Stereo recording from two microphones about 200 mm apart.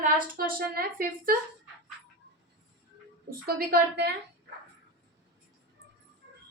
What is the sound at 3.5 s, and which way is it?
Speech, 50° right (ahead or behind).